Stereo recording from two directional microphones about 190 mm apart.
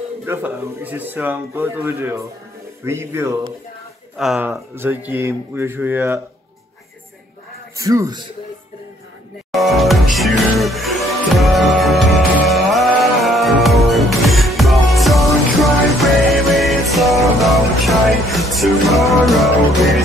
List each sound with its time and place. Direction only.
0.2 s speech: 10° right (ahead or behind)
7.7 s a man's voice: 20° right (ahead or behind)
9.5 s music: centre (ahead or behind)